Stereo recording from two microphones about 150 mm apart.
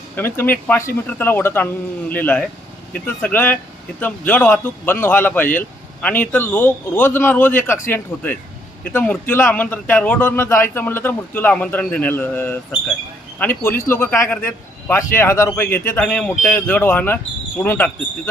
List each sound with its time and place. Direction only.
0.2 s speech: 15° left (ahead or behind)